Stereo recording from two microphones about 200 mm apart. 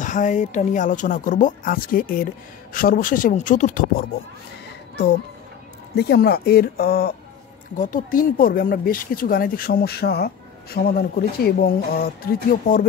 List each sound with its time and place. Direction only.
0.0 s speech: 40° left (ahead or behind)
5.9 s speech: 55° left (ahead or behind)